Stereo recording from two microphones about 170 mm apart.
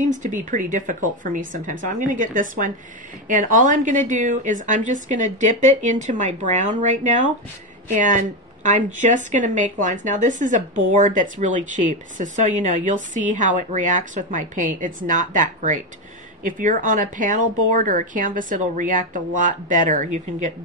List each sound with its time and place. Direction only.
0.1 s speech: 50° right (ahead or behind)